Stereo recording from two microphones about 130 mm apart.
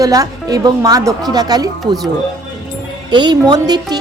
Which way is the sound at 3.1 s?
35° right (ahead or behind).